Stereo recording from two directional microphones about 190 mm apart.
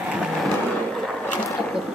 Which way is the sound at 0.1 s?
Centre (ahead or behind).